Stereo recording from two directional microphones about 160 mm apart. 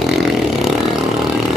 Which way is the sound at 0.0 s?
Centre (ahead or behind).